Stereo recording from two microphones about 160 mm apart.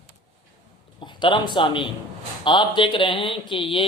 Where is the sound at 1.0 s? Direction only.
30° left (ahead or behind).